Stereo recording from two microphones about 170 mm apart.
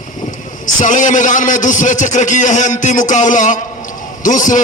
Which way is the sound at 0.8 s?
50° left (ahead or behind).